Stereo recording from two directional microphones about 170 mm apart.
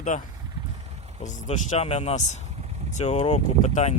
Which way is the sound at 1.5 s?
40° left (ahead or behind).